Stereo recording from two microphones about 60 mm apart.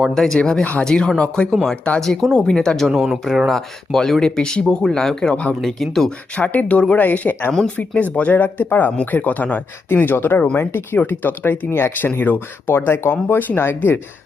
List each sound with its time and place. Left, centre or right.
0.1 s speech: centre
0.6 s speech: left
0.9 s speech: centre
2.0 s speech: centre; by 5.5 s left
5.6 s speech: centre
6.3 s speech: left